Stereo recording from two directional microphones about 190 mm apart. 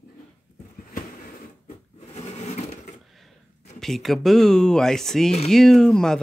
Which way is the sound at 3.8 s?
Centre (ahead or behind).